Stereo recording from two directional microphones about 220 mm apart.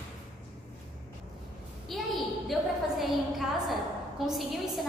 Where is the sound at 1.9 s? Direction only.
Centre (ahead or behind).